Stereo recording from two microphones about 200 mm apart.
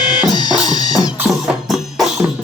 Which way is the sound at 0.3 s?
20° left (ahead or behind).